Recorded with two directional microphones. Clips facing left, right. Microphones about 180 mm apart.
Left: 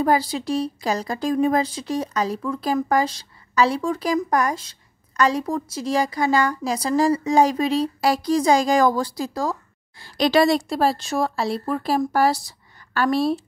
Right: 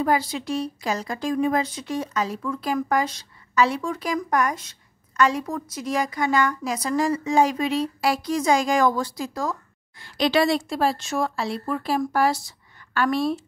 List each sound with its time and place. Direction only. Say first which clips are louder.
0.0 s a woman's voice: left 3 dB; 35° left (ahead or behind)